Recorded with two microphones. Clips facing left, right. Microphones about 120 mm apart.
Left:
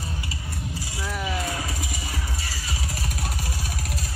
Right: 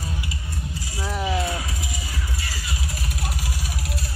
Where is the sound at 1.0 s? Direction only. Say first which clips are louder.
Right 4 dB; 30° right (ahead or behind).